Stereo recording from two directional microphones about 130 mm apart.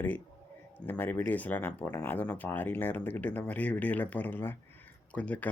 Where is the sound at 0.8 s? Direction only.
15° left (ahead or behind).